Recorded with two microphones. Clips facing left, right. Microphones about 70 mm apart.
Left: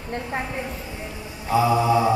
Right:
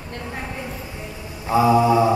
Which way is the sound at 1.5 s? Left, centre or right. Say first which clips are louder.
Right 3 dB; right.